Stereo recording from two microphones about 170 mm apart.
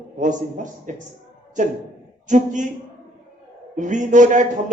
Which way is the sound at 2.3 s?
45° right (ahead or behind).